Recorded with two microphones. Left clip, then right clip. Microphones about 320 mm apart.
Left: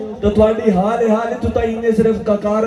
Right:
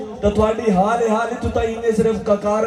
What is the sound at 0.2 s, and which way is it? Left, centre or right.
A man's voice, centre.